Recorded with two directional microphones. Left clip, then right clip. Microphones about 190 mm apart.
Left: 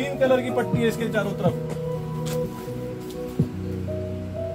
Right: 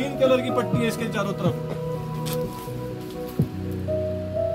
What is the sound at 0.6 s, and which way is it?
Music, 10° left (ahead or behind).